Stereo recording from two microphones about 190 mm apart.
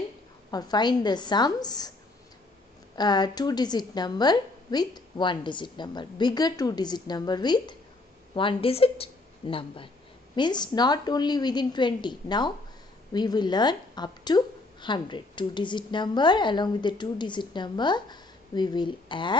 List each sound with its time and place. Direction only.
0.5 s speech: 20° left (ahead or behind)
3.0 s speech: 20° left (ahead or behind)